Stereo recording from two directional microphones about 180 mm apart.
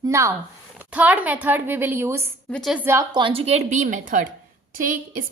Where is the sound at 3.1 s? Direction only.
30° right (ahead or behind).